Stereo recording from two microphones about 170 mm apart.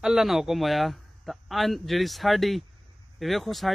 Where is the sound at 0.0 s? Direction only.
Centre (ahead or behind).